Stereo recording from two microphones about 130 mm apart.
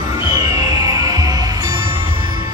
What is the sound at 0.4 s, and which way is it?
Music, 30° right (ahead or behind).